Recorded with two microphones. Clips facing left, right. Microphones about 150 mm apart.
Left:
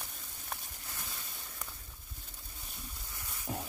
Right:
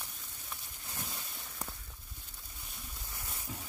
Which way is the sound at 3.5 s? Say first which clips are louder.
Left 8 dB; 55° left (ahead or behind).